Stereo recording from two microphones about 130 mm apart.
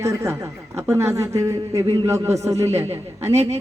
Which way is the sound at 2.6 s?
55° right (ahead or behind).